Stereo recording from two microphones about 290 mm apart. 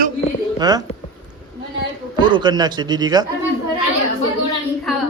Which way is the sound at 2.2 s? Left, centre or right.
Centre.